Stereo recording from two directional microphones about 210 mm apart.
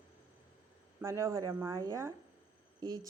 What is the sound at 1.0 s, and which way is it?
Speech, 15° right (ahead or behind).